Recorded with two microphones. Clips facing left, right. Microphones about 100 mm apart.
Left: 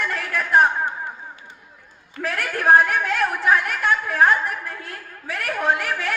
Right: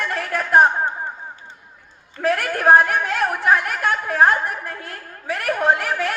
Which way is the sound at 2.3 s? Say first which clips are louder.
Right 1 dB; 45° right (ahead or behind).